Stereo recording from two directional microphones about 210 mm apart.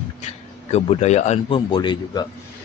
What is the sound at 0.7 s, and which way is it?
Speech, 35° left (ahead or behind).